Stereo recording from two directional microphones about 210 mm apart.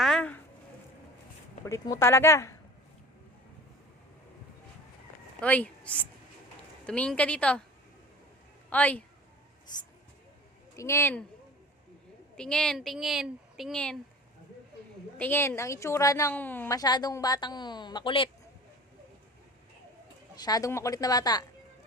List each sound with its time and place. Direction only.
0.0 s a sound: 5° left (ahead or behind)
1.6 s a woman's voice: 15° left (ahead or behind)
5.4 s a woman's voice: 5° left (ahead or behind)
8.7 s a woman's voice: 5° left (ahead or behind)
10.8 s a woman's voice: 15° left (ahead or behind)
12.4 s a woman's voice: 5° left (ahead or behind)
15.2 s a woman's voice: 10° left (ahead or behind)
20.3 s a woman's voice: 20° left (ahead or behind)